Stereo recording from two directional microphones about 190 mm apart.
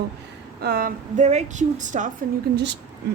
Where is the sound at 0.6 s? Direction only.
50° right (ahead or behind).